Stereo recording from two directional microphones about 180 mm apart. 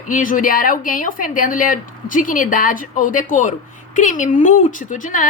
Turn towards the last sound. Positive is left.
turn(degrees=45)  # may be behind; listen again after turning